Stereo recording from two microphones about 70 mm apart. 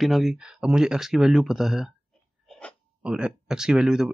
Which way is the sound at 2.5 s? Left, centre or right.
Centre.